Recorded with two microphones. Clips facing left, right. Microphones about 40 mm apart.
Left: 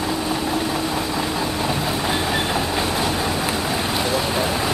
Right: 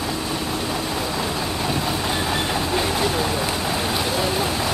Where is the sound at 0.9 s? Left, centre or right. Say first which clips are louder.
Left 2 dB; centre.